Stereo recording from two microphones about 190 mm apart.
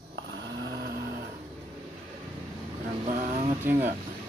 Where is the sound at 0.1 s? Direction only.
70° right (ahead or behind).